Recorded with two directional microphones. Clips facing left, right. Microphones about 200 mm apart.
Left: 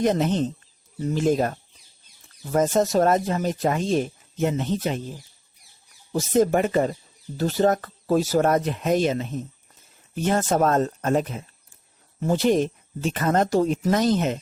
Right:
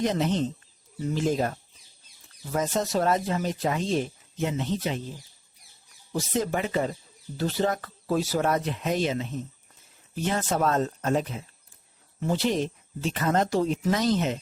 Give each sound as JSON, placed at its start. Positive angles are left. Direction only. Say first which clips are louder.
{"t": 0.0, "sound": "speech", "louder": "left 4 dB", "side_deg": 50}
{"t": 6.1, "sound": "speech", "louder": "left 7 dB", "side_deg": 45}